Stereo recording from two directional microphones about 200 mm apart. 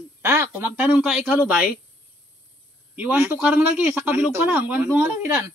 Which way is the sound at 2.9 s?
10° right (ahead or behind).